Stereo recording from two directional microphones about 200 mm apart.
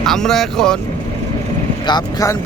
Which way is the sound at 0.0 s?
Centre (ahead or behind).